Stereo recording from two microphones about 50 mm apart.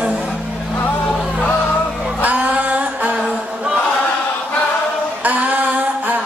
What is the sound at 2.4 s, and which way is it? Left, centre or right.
Music, right.